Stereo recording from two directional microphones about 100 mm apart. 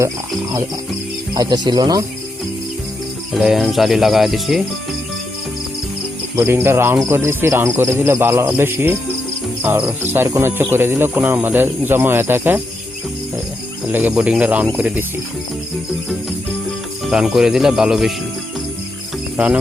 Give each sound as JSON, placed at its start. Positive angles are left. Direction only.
{"t": 1.3, "sound": "speech", "side_deg": -45}
{"t": 3.3, "sound": "cricket", "side_deg": -5}
{"t": 6.3, "sound": "speech", "side_deg": -25}
{"t": 13.8, "sound": "speech", "side_deg": -15}
{"t": 17.1, "sound": "cricket", "side_deg": -5}